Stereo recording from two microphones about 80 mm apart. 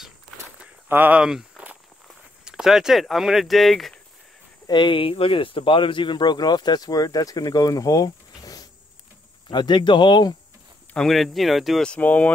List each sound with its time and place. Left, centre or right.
0.6 s a sound: right
1.6 s walk: centre
2.4 s speech: centre
4.6 s speech: left
9.5 s speech: left
11.0 s speech: centre
11.8 s speech: centre